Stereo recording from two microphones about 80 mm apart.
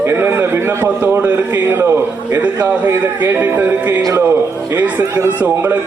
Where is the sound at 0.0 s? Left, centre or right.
Right.